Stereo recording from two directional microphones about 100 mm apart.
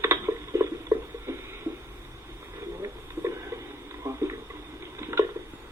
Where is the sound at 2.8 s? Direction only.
30° right (ahead or behind).